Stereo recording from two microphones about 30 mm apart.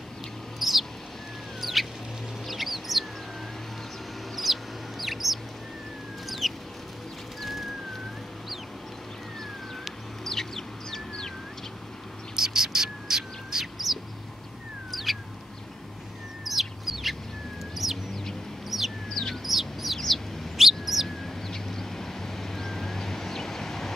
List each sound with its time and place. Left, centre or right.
0.6 s bird: centre
2.4 s chicken: centre
4.4 s chicken: centre
6.2 s a sound: centre
7.4 s music: centre
10.2 s chicken: centre
12.4 s bird: centre
14.9 s bird: centre
16.4 s chicken: centre
19.4 s bird: centre
21.2 s vehicle: centre